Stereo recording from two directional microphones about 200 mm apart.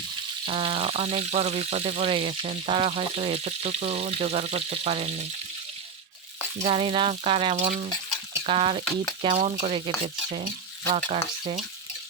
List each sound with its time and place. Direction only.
0.4 s speech: 30° right (ahead or behind)
6.6 s frying: 30° right (ahead or behind)
10.9 s speech: 30° right (ahead or behind)